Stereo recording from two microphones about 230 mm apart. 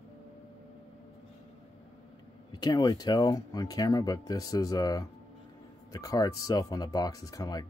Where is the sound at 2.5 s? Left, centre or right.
Centre.